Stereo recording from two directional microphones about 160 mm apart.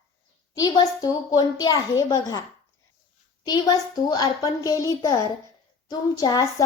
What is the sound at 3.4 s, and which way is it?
A woman's voice, 25° left (ahead or behind).